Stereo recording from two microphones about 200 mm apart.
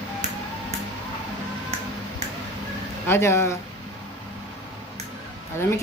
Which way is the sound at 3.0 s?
15° left (ahead or behind).